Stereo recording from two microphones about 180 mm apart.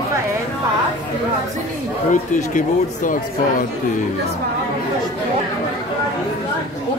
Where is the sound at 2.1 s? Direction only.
45° left (ahead or behind).